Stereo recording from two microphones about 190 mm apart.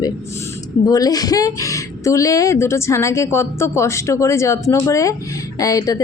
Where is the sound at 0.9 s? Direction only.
20° left (ahead or behind).